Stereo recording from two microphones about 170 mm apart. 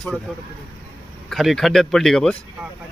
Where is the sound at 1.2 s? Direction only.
Centre (ahead or behind).